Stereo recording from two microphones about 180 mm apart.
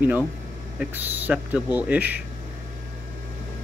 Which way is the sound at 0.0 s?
10° right (ahead or behind).